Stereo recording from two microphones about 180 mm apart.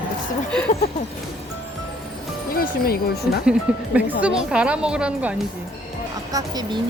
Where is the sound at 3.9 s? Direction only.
5° right (ahead or behind).